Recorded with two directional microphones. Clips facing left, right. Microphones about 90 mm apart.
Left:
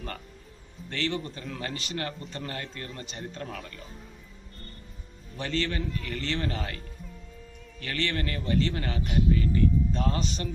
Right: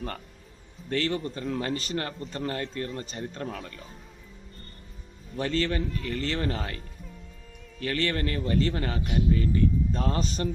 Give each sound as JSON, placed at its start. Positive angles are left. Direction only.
{"t": 0.9, "sound": "a man's voice", "side_deg": -35}
{"t": 5.4, "sound": "a man's voice", "side_deg": -35}
{"t": 7.8, "sound": "a man's voice", "side_deg": -35}